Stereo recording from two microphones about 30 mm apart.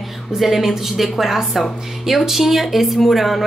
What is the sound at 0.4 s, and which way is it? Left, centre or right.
Speech, centre.